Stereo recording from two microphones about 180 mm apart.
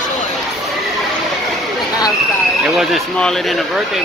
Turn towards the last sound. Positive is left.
turn(degrees=5)  # may be behind; listen again after turning